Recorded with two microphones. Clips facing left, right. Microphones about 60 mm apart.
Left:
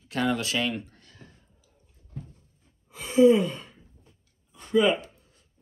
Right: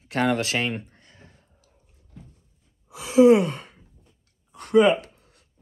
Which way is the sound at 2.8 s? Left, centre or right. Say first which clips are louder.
Right 3 dB; right.